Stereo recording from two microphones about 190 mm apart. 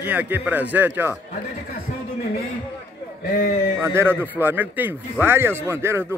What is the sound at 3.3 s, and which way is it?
Speech, 50° left (ahead or behind).